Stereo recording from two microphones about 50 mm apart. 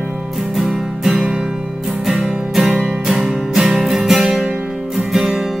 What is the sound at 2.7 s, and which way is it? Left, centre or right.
Music, centre.